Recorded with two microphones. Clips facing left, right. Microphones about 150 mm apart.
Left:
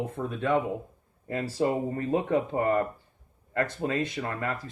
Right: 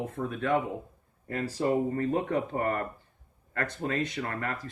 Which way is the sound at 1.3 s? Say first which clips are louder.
Left 1 dB; 20° left (ahead or behind).